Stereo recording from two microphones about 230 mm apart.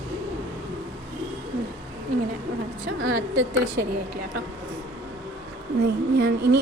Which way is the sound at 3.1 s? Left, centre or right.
Right.